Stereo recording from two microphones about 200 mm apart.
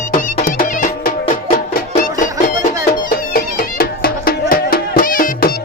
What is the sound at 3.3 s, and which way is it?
Music, 45° left (ahead or behind).